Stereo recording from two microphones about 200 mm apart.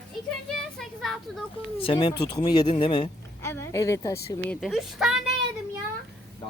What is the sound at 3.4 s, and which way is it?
Speech, 10° left (ahead or behind).